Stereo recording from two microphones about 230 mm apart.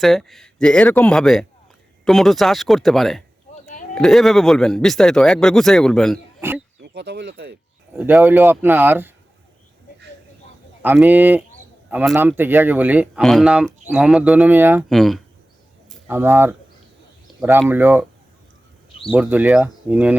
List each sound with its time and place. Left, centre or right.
0.0 s speech: centre
3.5 s a sound: left
3.9 s speech: centre
6.8 s speech: right
7.9 s a man's voice: centre
10.8 s a man's voice: centre
17.7 s a man's voice: centre
19.1 s a man's voice: centre